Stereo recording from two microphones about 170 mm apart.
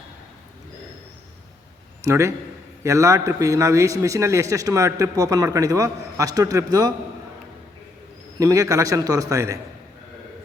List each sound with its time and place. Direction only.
2.0 s a man's voice: 15° right (ahead or behind)
8.4 s a man's voice: 20° right (ahead or behind)